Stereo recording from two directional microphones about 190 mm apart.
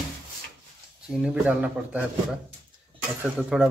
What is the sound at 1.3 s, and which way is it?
Speech, 5° right (ahead or behind).